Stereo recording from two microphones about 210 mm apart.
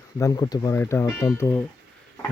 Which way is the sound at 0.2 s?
15° left (ahead or behind).